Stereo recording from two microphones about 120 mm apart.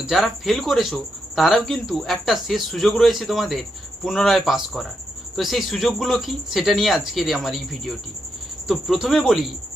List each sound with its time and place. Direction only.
0.0 s speech: centre (ahead or behind)